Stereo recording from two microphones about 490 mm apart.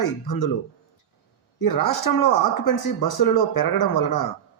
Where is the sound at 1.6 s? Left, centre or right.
Left.